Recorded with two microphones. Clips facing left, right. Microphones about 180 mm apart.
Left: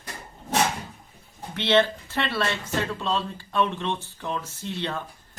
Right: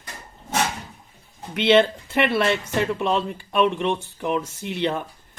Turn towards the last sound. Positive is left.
turn(degrees=-15)  # may be behind; listen again after turning